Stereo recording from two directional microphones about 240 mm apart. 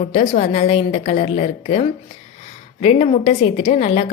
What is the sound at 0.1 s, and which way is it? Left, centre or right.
A woman's voice, left.